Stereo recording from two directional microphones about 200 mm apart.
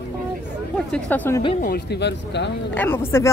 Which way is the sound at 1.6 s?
55° left (ahead or behind).